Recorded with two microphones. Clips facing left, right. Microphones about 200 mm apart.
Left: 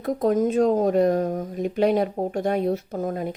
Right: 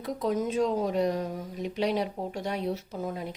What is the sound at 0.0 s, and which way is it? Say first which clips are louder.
Speech: left 8 dB; 50° left (ahead or behind).